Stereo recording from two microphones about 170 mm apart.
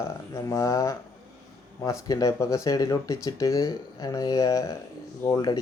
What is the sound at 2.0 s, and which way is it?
Speech, 20° left (ahead or behind).